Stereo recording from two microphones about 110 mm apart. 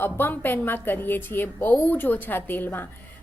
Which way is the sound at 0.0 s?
20° left (ahead or behind).